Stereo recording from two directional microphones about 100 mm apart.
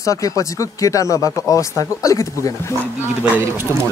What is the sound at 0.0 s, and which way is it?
Speech, 35° left (ahead or behind).